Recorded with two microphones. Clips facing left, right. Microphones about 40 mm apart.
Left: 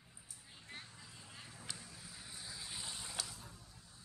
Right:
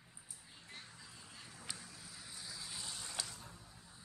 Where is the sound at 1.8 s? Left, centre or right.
Centre.